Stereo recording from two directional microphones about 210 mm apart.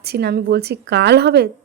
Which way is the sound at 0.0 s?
50° right (ahead or behind).